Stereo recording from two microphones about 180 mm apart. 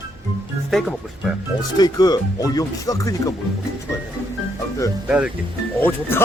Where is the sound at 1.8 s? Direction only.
20° left (ahead or behind).